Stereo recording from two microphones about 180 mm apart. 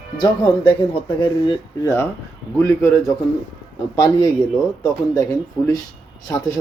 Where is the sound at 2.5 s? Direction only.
15° left (ahead or behind).